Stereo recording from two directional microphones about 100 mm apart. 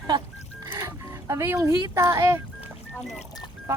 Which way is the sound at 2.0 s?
30° right (ahead or behind).